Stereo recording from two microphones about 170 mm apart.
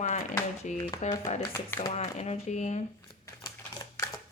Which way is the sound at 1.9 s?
40° left (ahead or behind).